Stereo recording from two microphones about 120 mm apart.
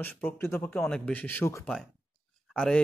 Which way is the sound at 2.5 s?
5° left (ahead or behind).